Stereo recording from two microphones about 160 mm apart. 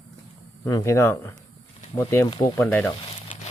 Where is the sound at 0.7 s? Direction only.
20° left (ahead or behind).